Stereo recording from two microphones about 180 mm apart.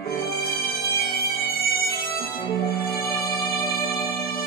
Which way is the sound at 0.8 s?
60° left (ahead or behind).